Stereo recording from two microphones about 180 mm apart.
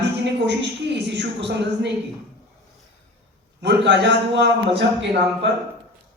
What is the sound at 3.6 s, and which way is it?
Speech, 75° right (ahead or behind).